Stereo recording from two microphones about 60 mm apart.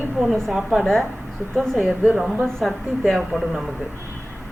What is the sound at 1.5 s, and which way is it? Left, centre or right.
Speech, centre.